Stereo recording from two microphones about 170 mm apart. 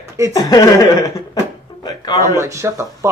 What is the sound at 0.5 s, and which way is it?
Speech, 20° left (ahead or behind).